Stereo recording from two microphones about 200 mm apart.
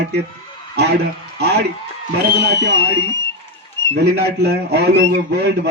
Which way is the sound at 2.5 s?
60° right (ahead or behind).